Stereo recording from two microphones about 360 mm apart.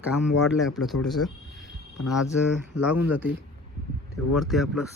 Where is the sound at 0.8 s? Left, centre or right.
Centre.